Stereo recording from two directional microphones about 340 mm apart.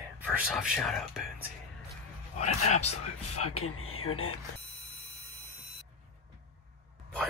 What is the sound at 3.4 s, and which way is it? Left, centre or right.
Speech, left.